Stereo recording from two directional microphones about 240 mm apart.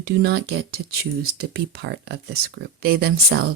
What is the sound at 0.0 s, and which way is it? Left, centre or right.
Speech, right.